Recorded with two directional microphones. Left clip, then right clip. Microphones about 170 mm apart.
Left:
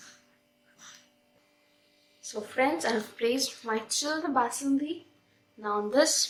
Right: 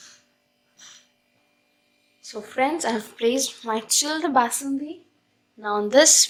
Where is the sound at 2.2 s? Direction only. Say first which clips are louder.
Right 4 dB; 35° right (ahead or behind); by 6.3 s 60° right (ahead or behind).